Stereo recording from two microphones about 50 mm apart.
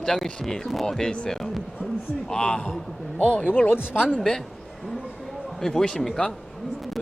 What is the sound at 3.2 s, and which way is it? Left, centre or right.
Speech, left.